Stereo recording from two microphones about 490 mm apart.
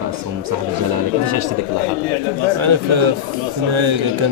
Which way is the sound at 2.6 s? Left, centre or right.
Right.